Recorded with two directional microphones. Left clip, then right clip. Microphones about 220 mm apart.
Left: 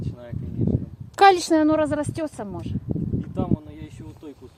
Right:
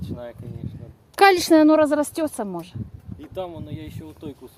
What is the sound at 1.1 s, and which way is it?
Speech, 10° right (ahead or behind).